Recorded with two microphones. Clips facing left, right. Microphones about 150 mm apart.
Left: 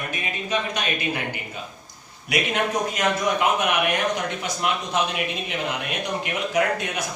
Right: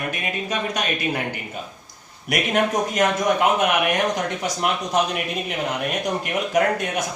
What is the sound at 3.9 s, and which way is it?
Speech, 45° right (ahead or behind).